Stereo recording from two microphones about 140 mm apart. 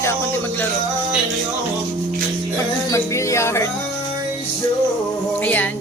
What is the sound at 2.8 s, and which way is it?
Speech, 20° left (ahead or behind).